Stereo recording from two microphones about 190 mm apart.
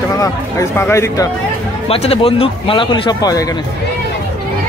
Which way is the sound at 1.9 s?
30° left (ahead or behind).